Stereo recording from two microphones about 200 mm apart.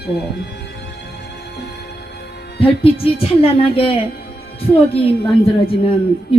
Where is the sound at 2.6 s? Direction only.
30° left (ahead or behind).